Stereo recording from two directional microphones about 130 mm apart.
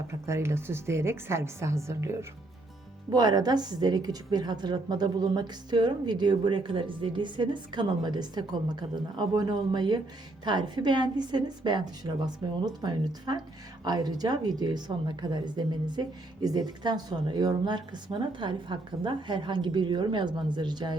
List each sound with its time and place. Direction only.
0.3 s a woman's voice: 20° right (ahead or behind)